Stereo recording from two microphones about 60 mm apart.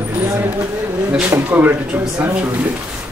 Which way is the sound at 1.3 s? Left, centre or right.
Right.